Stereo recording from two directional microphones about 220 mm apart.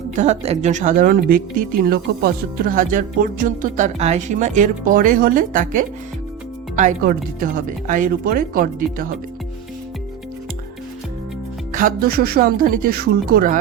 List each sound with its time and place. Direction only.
0.2 s speech: 30° right (ahead or behind)
11.7 s speech: 40° right (ahead or behind)